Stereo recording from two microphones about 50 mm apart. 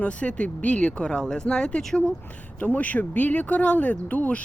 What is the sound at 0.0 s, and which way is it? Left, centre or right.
Speech, left.